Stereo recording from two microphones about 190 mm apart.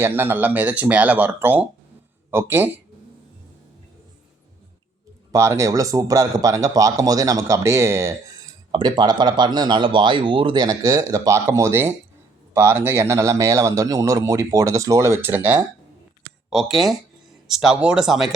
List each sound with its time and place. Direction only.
0.0 s a man's voice: 10° right (ahead or behind)
5.3 s a man's voice: 15° right (ahead or behind)